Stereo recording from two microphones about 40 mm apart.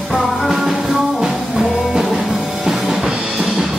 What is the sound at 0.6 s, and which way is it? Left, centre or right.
Music, centre.